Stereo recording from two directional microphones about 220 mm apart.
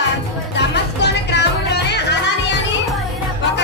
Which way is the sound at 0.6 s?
50° left (ahead or behind).